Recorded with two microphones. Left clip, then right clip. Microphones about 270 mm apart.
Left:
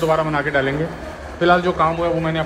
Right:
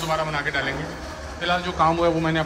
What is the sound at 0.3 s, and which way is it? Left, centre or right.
Speech, centre.